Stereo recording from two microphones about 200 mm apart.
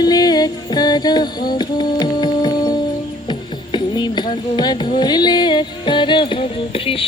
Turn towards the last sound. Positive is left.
turn(degrees=25)  # may be behind; listen again after turning